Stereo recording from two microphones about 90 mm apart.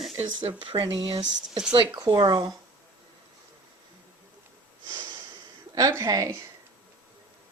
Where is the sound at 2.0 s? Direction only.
50° right (ahead or behind).